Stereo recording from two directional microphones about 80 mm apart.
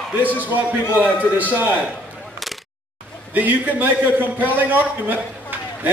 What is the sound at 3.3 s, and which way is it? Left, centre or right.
A man's voice, right.